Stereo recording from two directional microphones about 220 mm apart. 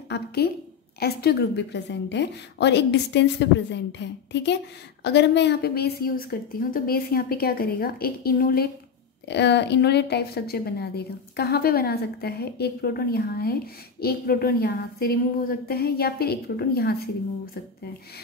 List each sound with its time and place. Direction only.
0.1 s a woman's voice: 45° left (ahead or behind)